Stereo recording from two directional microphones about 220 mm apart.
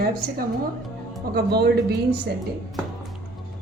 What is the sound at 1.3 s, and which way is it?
Speech, 45° right (ahead or behind).